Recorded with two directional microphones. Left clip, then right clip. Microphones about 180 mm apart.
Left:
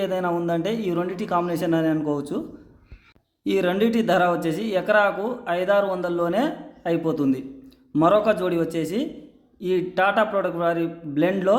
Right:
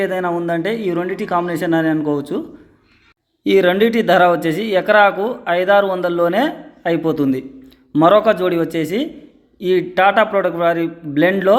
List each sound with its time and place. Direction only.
0.0 s speech: 10° right (ahead or behind)
3.4 s speech: 15° right (ahead or behind)